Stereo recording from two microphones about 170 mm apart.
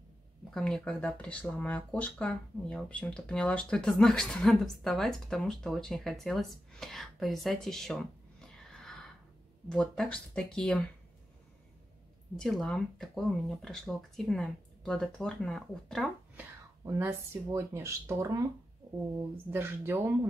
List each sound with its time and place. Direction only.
0.5 s speech: 5° left (ahead or behind)
12.4 s speech: 5° left (ahead or behind)
16.3 s speech: 15° right (ahead or behind)